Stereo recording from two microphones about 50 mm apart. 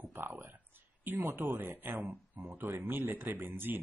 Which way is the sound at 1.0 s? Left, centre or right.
Right.